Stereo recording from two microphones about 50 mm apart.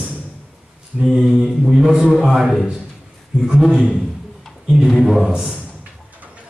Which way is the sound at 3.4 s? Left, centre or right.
Centre.